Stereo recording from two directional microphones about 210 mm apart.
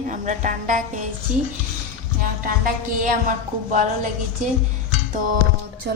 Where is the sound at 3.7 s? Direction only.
35° right (ahead or behind).